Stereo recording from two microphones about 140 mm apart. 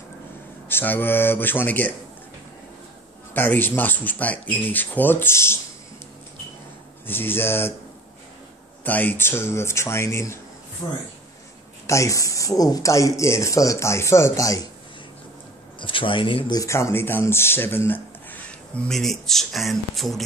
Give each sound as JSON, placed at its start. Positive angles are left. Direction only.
{"t": 0.7, "sound": "speech", "side_deg": 15}
{"t": 3.3, "sound": "speech", "side_deg": 15}
{"t": 7.1, "sound": "speech", "side_deg": 15}
{"t": 8.8, "sound": "speech", "side_deg": 10}
{"t": 15.8, "sound": "speech", "side_deg": 35}